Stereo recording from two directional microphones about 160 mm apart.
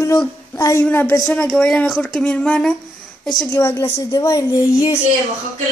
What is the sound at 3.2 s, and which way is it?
Speech, 25° left (ahead or behind).